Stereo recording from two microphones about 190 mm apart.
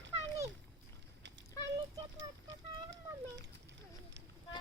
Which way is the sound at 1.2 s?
70° right (ahead or behind).